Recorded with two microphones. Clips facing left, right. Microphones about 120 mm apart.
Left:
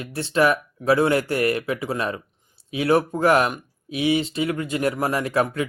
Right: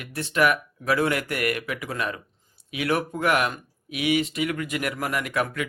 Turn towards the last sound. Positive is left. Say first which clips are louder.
# left 5 dB
turn(degrees=30)  # may be behind; listen again after turning